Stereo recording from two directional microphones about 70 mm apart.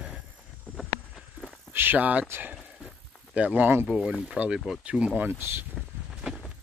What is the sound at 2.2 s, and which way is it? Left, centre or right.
Speech, right.